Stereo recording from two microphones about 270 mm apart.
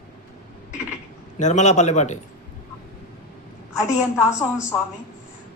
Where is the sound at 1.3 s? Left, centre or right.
Left.